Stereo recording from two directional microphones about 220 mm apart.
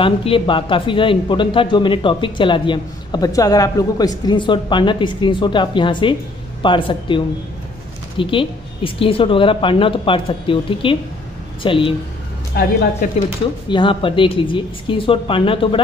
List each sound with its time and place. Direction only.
0.0 s speech: 25° left (ahead or behind)
12.6 s speech: 45° left (ahead or behind)
13.7 s speech: 20° left (ahead or behind)